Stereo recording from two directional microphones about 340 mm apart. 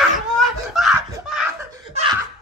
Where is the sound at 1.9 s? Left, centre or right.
Centre.